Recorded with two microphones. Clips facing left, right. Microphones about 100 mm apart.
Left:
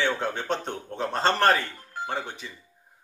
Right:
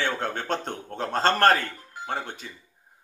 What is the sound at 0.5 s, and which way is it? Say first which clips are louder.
Speech: even; 50° right (ahead or behind).